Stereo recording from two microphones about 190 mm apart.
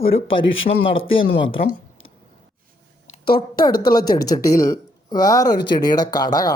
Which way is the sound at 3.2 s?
55° left (ahead or behind).